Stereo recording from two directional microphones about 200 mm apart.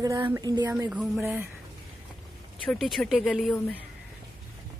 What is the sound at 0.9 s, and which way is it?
Speech, centre (ahead or behind).